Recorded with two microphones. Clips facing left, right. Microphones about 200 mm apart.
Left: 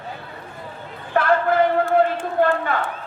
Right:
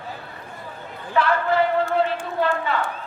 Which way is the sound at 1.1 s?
50° left (ahead or behind).